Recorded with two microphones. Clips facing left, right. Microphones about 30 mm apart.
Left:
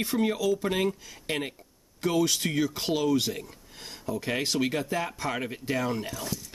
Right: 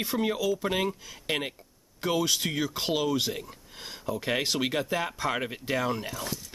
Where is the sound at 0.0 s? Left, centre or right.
Centre.